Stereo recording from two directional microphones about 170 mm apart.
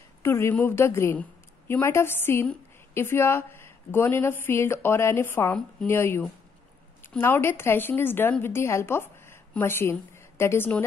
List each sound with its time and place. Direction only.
0.2 s a woman's voice: 15° left (ahead or behind)